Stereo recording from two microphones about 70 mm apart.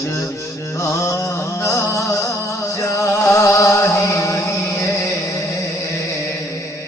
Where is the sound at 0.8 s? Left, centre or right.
Left.